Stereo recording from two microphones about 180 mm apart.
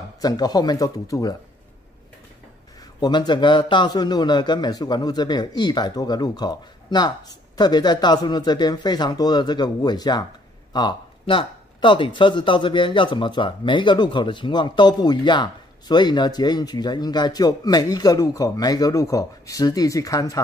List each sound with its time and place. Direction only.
0.2 s speech: 20° left (ahead or behind)
2.8 s speech: 25° left (ahead or behind)